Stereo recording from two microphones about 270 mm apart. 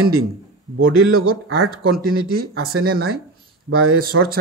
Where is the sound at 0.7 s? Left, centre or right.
Right.